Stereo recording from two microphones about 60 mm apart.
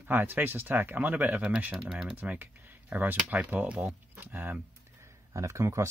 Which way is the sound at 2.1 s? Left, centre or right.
Right.